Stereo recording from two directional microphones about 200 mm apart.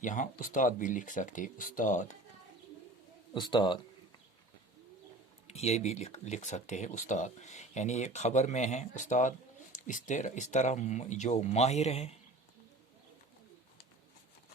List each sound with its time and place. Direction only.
0.0 s speech: 40° left (ahead or behind)
3.3 s a man's voice: 20° left (ahead or behind)
5.5 s speech: 30° left (ahead or behind)